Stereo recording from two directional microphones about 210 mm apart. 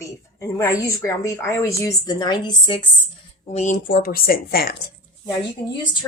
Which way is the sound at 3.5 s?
35° left (ahead or behind).